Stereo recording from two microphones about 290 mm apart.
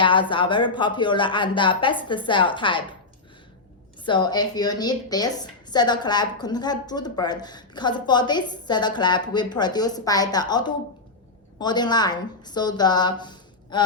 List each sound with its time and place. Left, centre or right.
0.0 s a woman's voice: centre
4.0 s a woman's voice: centre